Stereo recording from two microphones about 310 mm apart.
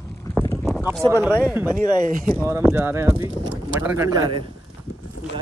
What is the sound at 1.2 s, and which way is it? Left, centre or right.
Speech, centre.